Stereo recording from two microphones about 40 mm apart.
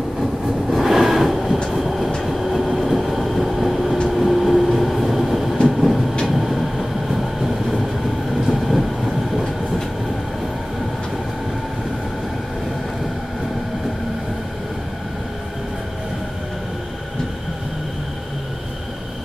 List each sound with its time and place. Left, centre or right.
0.2 s train: centre
8.5 s vehicle: centre